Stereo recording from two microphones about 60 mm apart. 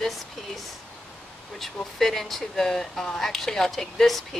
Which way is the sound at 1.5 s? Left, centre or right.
Centre.